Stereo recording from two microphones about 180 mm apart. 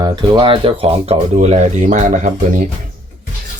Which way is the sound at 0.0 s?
25° right (ahead or behind).